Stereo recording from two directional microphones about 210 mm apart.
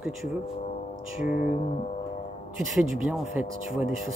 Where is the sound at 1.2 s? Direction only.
40° left (ahead or behind).